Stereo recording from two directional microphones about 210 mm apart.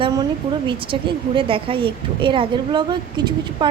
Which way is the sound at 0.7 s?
25° right (ahead or behind).